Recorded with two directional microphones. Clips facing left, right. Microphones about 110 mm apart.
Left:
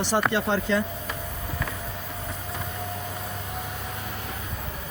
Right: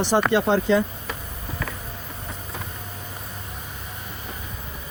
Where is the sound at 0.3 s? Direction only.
20° right (ahead or behind).